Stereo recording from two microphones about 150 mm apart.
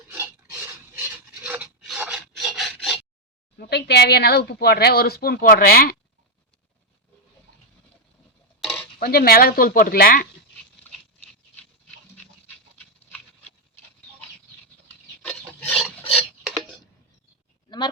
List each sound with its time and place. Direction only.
0.9 s rub: 15° right (ahead or behind)
3.6 s speech: 90° left
8.6 s dishes: 5° left (ahead or behind)
9.0 s speech: 90° left
11.5 s pant: 10° left (ahead or behind)
14.8 s filing: 10° left (ahead or behind)
16.5 s tick-tock: centre (ahead or behind)
17.7 s a sound: 30° left (ahead or behind)